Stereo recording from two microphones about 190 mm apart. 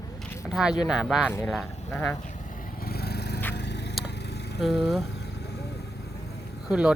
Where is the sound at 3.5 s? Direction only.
65° left (ahead or behind).